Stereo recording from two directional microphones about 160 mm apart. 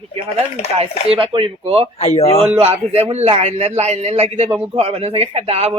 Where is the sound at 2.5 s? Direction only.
40° right (ahead or behind).